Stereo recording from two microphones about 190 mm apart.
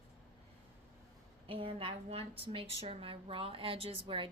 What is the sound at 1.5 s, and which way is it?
A woman's voice, 30° right (ahead or behind).